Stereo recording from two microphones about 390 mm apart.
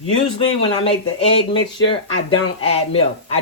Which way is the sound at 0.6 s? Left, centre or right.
Centre.